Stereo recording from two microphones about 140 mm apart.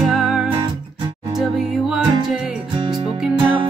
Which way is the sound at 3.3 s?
40° right (ahead or behind).